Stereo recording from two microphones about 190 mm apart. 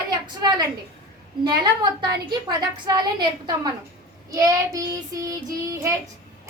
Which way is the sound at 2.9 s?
25° right (ahead or behind).